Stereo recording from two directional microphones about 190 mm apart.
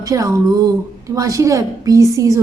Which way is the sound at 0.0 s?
15° right (ahead or behind).